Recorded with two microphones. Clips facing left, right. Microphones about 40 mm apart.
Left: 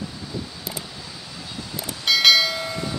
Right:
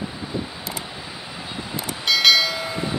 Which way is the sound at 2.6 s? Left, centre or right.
Centre.